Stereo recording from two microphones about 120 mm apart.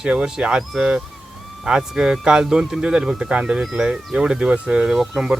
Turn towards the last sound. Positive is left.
turn(degrees=-5)  # may be behind; listen again after turning